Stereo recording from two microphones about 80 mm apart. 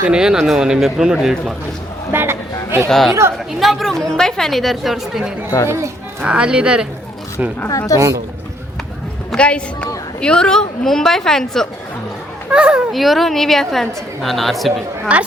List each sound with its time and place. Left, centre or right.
0.0 s a man's voice: centre
2.1 s a sound: right
2.9 s a woman's voice: centre
5.6 s speech: right
6.2 s a man's voice: centre
7.7 s a woman's voice: left
9.3 s a woman's voice: centre
12.5 s a man's voice: centre
12.9 s a woman's voice: centre
15.1 s a man's voice: centre